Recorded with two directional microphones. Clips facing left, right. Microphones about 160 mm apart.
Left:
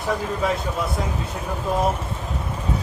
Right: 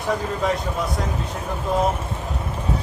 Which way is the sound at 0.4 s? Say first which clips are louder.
Right 1 dB; 5° left (ahead or behind).